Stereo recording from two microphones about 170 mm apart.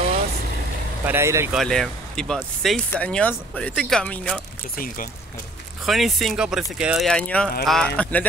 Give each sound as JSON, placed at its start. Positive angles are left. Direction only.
{"t": 1.0, "sound": "speech", "side_deg": -15}
{"t": 1.5, "sound": "speech", "side_deg": 0}
{"t": 4.7, "sound": "speech", "side_deg": 55}
{"t": 5.9, "sound": "speech", "side_deg": 0}